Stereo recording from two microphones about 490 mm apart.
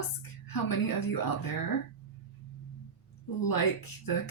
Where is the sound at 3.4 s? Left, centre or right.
Left.